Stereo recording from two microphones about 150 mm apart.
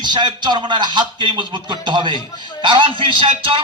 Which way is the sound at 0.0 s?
30° right (ahead or behind).